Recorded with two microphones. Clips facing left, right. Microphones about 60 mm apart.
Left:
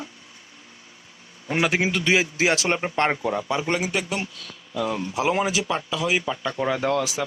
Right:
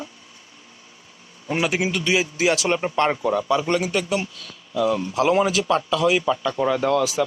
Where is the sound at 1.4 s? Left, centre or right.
Left.